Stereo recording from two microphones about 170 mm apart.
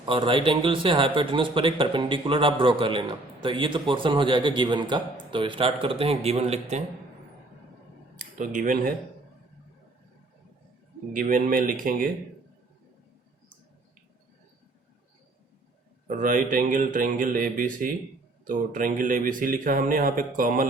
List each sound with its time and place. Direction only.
0.0 s a man's voice: 30° right (ahead or behind)
8.1 s speech: 50° right (ahead or behind)
11.1 s a man's voice: 50° right (ahead or behind)
16.0 s a man's voice: 50° right (ahead or behind)